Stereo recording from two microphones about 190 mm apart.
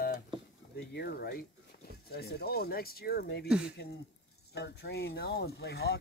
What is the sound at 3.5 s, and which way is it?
Speech, 5° right (ahead or behind).